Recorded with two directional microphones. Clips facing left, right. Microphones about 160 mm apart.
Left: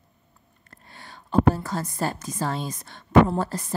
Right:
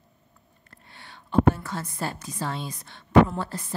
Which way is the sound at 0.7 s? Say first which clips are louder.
Left 3 dB; 40° left (ahead or behind).